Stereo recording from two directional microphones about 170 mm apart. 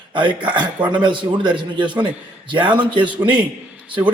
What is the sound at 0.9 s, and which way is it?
A man's voice, 30° right (ahead or behind).